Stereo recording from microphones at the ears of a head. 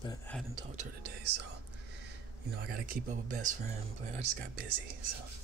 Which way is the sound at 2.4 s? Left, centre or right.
Right.